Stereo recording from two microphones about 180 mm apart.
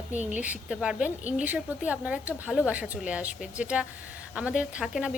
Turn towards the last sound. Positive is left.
turn(degrees=-5)  # may be behind; listen again after turning